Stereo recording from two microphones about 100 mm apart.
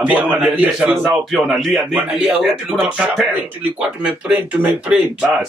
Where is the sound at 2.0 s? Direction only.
15° right (ahead or behind).